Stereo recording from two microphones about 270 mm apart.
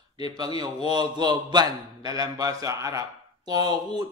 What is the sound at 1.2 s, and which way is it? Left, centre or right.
Speech, centre.